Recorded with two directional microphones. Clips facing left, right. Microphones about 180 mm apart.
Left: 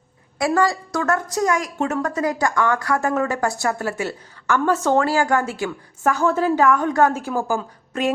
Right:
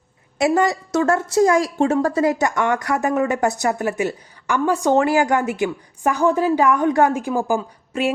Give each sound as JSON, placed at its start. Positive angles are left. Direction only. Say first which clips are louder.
{"t": 0.3, "sound": "a woman's voice", "louder": "right 2 dB", "side_deg": -20}